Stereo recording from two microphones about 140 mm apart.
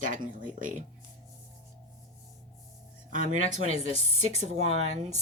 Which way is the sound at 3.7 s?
45° left (ahead or behind).